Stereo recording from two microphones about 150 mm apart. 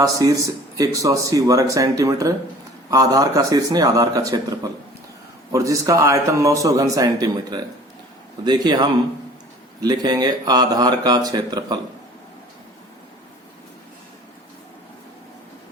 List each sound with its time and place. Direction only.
0.0 s speech: 20° right (ahead or behind)